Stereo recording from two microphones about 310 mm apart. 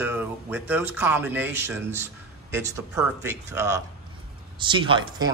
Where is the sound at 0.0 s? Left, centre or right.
Centre.